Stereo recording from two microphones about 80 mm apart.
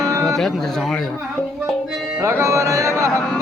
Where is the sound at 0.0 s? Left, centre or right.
Right.